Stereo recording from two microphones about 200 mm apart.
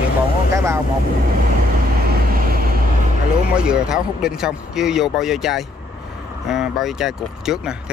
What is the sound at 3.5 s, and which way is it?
Speech, 5° right (ahead or behind).